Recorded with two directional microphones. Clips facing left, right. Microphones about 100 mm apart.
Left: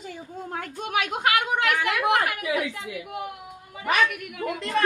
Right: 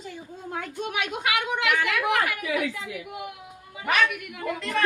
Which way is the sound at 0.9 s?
45° left (ahead or behind).